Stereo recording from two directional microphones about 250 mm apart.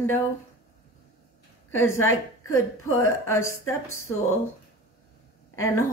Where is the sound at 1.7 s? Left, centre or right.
Centre.